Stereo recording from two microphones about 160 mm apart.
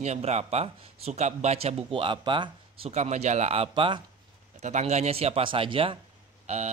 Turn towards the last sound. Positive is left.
turn(degrees=-40)  # may be behind; listen again after turning